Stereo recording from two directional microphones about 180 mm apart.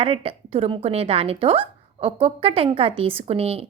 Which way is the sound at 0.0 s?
30° right (ahead or behind).